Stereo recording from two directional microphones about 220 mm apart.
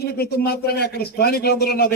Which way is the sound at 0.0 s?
45° left (ahead or behind).